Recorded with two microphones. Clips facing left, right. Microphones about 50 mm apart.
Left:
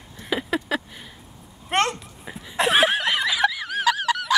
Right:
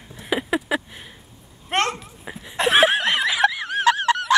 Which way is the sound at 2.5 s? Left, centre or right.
Centre.